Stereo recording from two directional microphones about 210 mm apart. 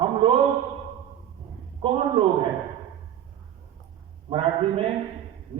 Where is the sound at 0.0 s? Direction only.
25° right (ahead or behind).